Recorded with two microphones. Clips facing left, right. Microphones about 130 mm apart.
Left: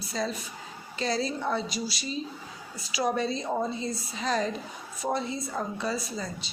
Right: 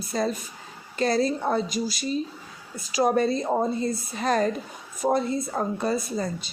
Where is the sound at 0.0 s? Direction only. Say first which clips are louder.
Right 5 dB; 50° right (ahead or behind).